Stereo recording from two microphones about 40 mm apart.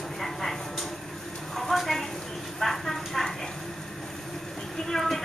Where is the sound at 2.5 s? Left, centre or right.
Centre.